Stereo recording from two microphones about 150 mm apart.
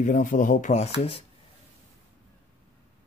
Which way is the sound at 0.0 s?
60° left (ahead or behind).